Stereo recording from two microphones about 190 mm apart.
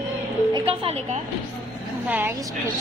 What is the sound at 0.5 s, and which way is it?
Speech, 30° right (ahead or behind).